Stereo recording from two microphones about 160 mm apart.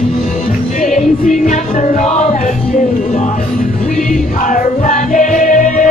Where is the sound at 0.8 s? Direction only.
50° left (ahead or behind).